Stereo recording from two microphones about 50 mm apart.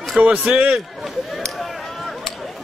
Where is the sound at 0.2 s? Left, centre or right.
Right.